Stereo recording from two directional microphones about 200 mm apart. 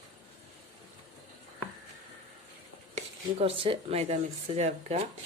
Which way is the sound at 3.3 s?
30° right (ahead or behind).